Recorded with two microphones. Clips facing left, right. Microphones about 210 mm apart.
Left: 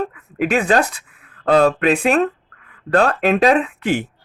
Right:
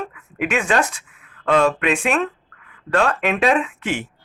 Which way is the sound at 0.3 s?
35° left (ahead or behind).